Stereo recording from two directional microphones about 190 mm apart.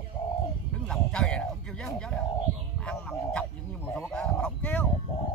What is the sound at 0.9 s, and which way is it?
Speech, 5° left (ahead or behind).